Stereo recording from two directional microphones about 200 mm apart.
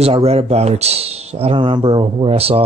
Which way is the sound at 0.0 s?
30° right (ahead or behind).